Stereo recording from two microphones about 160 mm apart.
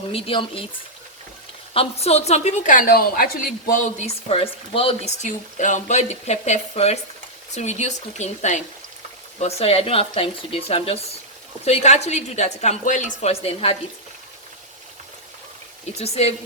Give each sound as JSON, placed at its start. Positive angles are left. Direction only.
{"t": 0.1, "sound": "speech", "side_deg": 35}
{"t": 1.7, "sound": "speech", "side_deg": 40}
{"t": 4.0, "sound": "speech", "side_deg": 35}
{"t": 16.0, "sound": "speech", "side_deg": 40}